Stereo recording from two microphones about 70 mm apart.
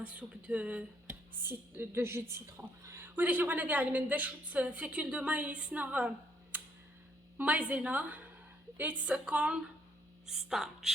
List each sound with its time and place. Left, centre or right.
0.0 s speech: centre
1.4 s a woman's voice: right
3.2 s a woman's voice: right; by 10.9 s centre